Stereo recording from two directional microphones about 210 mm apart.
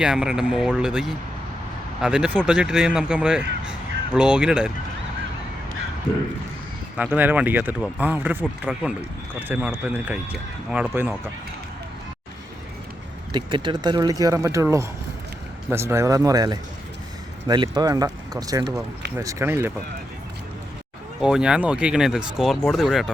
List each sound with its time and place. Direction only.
0.0 s speech: 5° right (ahead or behind)
6.9 s speech: 5° right (ahead or behind)
13.3 s speech: 20° right (ahead or behind)
21.2 s speech: 5° right (ahead or behind)